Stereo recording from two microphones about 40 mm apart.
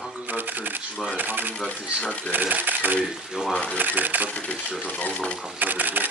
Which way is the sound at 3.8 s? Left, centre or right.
Right.